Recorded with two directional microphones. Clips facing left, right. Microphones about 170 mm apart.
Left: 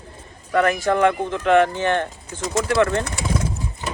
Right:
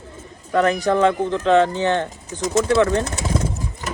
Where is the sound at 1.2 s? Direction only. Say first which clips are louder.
Right 1 dB; 15° left (ahead or behind).